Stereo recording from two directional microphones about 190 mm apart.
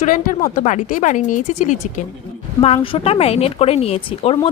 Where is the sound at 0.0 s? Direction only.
45° left (ahead or behind).